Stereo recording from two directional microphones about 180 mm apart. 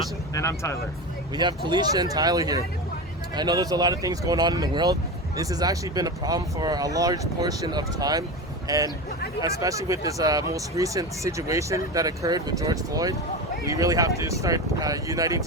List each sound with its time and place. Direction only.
0.3 s speech: 15° left (ahead or behind)
1.4 s a man's voice: 25° right (ahead or behind)